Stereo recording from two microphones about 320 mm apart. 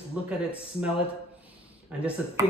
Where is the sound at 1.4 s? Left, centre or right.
Centre.